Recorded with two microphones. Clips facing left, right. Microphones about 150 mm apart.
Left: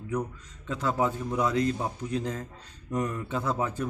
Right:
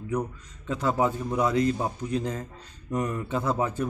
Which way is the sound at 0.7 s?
10° right (ahead or behind).